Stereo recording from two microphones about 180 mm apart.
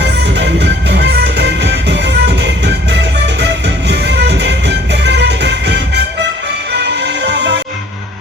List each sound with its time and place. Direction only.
0.0 s music: 70° right (ahead or behind)